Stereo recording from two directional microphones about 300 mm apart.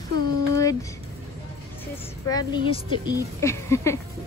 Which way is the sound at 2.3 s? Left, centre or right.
Centre.